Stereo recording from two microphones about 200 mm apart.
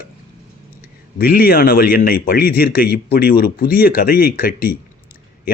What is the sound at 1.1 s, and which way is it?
A man's voice, 50° left (ahead or behind).